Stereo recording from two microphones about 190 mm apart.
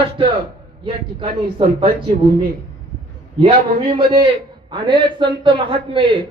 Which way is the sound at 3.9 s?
25° right (ahead or behind).